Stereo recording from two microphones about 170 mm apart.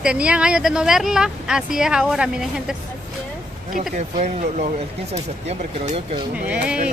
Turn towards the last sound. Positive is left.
turn(degrees=-5)  # may be behind; listen again after turning